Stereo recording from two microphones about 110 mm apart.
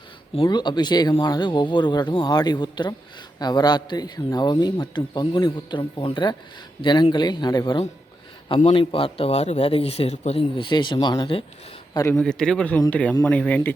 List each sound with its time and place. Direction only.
0.4 s a man's voice: 40° left (ahead or behind)
8.4 s a man's voice: 55° left (ahead or behind); by 10.4 s 70° left (ahead or behind)
10.5 s speech: 45° left (ahead or behind)
12.1 s a man's voice: 5° left (ahead or behind)